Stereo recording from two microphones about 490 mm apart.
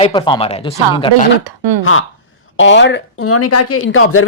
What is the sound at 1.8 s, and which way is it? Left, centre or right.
Speech, left.